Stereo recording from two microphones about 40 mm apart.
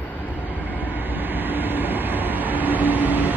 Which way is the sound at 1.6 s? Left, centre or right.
Right.